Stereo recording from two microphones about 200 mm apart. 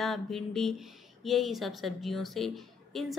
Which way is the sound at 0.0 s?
Centre (ahead or behind).